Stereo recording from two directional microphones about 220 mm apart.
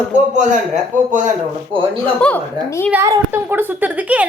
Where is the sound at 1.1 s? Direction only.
35° right (ahead or behind).